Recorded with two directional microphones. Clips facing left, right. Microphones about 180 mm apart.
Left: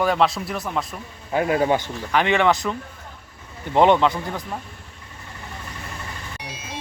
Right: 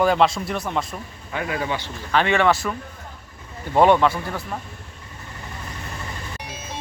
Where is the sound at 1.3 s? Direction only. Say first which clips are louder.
Left 7 dB; 45° left (ahead or behind).